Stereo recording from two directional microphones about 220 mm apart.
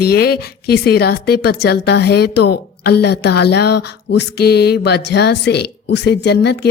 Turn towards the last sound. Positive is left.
turn(degrees=50)  # may be behind; listen again after turning